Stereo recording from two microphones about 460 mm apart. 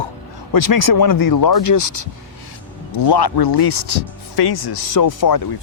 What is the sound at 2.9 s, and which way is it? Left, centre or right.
Speech, left.